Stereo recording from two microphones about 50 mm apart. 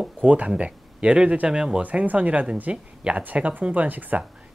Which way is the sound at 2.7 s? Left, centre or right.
Centre.